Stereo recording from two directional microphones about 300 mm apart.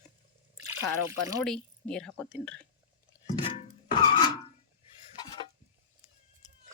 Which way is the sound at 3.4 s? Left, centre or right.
Centre.